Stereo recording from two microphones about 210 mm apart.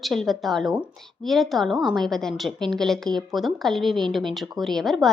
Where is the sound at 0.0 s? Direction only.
Centre (ahead or behind).